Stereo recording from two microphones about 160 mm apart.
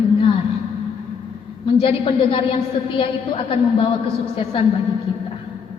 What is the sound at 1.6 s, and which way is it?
A woman's voice, 35° left (ahead or behind).